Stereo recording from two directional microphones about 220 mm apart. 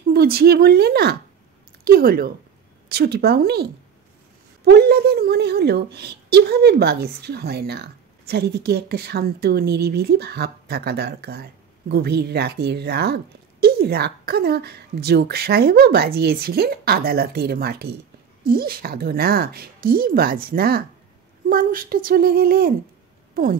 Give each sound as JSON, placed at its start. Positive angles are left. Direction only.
{"t": 0.1, "sound": "a woman's voice", "side_deg": -45}
{"t": 4.6, "sound": "a woman's voice", "side_deg": -45}